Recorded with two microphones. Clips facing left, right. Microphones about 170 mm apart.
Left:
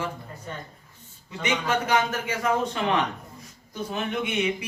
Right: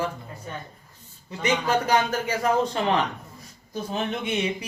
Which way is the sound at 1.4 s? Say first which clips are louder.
Right 2 dB; 35° right (ahead or behind).